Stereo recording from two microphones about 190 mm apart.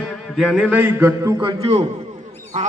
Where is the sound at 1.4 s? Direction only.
30° right (ahead or behind).